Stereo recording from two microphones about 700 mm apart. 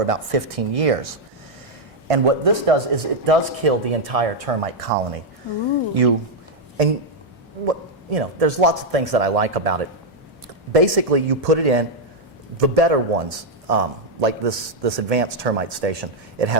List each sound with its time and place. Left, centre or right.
0.0 s speech: right
2.0 s speech: right
7.6 s a man's voice: right